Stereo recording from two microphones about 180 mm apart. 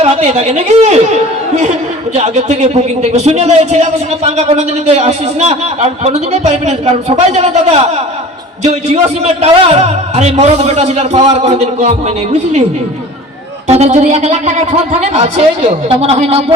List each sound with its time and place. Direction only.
0.0 s a man's voice: 35° right (ahead or behind)
13.7 s a man's voice: 35° right (ahead or behind)